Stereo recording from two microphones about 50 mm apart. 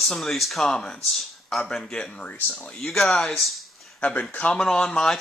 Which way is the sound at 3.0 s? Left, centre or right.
Centre.